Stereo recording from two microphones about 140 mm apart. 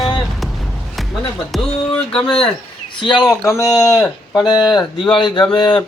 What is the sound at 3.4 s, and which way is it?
Speech, 20° left (ahead or behind).